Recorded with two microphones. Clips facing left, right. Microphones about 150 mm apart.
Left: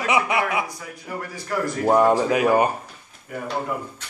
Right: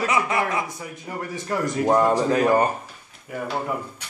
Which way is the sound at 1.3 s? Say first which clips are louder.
Right 1 dB; 20° right (ahead or behind).